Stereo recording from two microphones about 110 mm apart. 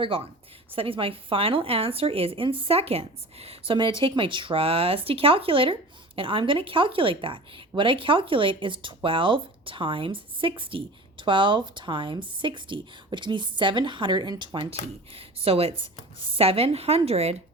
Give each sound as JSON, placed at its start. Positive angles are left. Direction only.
{"t": 0.0, "sound": "speech", "side_deg": -55}
{"t": 4.0, "sound": "a woman's voice", "side_deg": -50}